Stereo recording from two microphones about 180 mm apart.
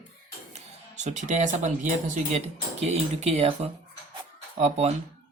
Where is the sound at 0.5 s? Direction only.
40° right (ahead or behind).